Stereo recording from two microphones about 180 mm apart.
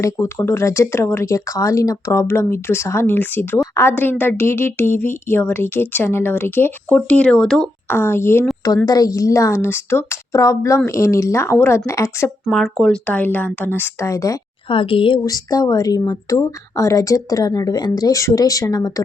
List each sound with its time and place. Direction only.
0.0 s a woman's voice: 15° left (ahead or behind)
12.5 s a woman's voice: centre (ahead or behind); by 14.3 s 20° left (ahead or behind)
14.7 s speech: 30° left (ahead or behind)